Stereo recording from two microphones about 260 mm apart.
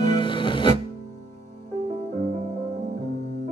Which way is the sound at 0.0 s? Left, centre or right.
Centre.